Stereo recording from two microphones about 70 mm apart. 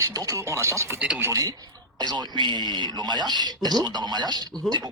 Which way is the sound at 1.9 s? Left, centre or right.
Right.